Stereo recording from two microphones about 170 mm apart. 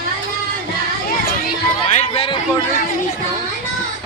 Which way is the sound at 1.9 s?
35° left (ahead or behind).